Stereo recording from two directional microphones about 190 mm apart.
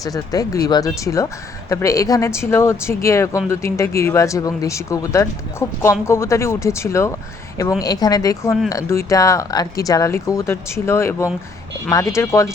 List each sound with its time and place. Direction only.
0.0 s speech: 20° left (ahead or behind)